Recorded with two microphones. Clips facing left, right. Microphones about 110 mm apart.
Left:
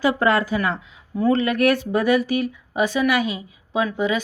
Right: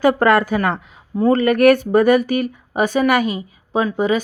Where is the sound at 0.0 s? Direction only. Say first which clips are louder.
Right 5 dB; 55° right (ahead or behind).